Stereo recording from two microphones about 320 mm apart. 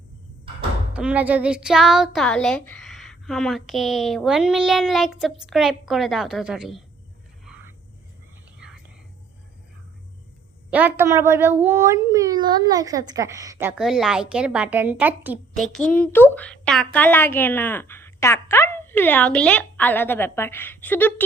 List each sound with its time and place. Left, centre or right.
0.9 s a child's voice: centre
8.5 s whispering: centre
10.7 s a child's voice: centre